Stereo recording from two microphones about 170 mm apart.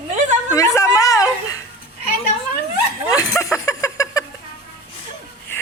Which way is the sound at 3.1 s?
15° left (ahead or behind).